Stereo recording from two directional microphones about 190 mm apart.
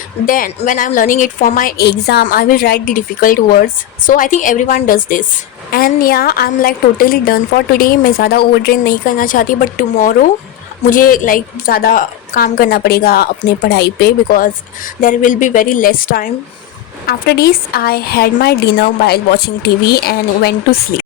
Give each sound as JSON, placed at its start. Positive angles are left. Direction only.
{"t": 0.3, "sound": "a woman's voice", "side_deg": 45}